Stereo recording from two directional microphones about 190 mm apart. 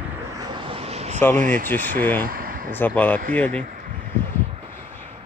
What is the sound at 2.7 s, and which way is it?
Speech, 10° left (ahead or behind).